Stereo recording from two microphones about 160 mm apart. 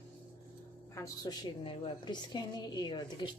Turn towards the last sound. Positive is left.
turn(degrees=25)  # may be behind; listen again after turning